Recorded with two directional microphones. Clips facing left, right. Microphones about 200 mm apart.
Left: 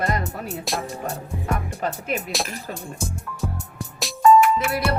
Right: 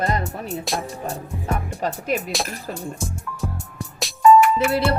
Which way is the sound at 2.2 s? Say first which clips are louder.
Right 1 dB; centre (ahead or behind).